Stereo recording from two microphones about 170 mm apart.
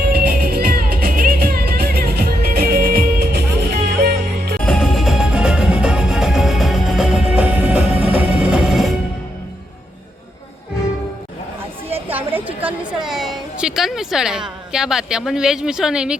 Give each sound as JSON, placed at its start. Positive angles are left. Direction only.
{"t": 0.0, "sound": "music", "side_deg": -65}
{"t": 4.6, "sound": "music", "side_deg": 5}
{"t": 12.6, "sound": "a sound", "side_deg": -5}